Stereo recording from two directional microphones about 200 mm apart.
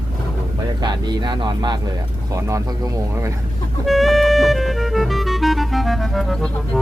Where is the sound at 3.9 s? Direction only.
Centre (ahead or behind).